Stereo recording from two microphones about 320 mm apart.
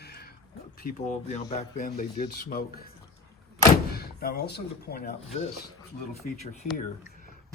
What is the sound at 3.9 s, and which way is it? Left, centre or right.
Speech, left.